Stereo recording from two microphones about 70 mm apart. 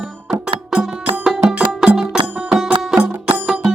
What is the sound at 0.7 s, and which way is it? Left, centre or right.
Music, centre.